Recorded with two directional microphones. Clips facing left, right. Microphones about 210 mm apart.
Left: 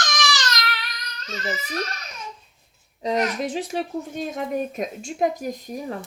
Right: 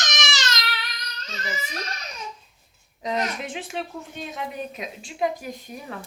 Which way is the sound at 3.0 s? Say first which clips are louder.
Left 4 dB; 35° left (ahead or behind).